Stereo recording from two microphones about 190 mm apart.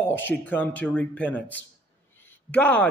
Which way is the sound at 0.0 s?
10° left (ahead or behind).